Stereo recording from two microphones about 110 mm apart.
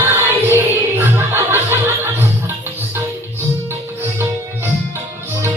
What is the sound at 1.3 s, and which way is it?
Chuckle, 20° right (ahead or behind).